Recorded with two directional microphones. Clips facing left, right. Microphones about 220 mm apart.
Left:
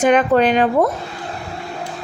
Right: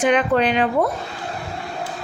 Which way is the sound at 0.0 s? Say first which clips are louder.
Left 4 dB; 45° left (ahead or behind).